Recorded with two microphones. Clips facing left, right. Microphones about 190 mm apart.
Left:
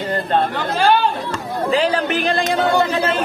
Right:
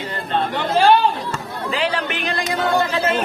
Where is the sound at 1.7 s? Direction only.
40° left (ahead or behind).